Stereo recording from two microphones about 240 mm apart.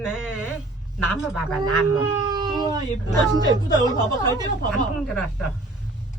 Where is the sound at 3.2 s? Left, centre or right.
Centre.